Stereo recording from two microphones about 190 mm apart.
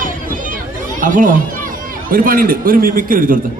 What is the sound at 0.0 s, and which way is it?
Chatter, 45° right (ahead or behind).